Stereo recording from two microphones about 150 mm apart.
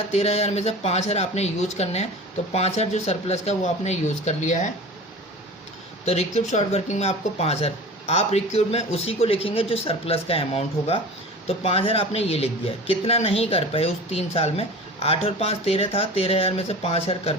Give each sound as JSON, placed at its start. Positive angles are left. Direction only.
{"t": 0.1, "sound": "speech", "side_deg": 45}
{"t": 6.1, "sound": "speech", "side_deg": 45}